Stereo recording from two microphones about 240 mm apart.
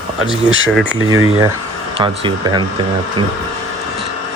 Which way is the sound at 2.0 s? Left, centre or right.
Centre.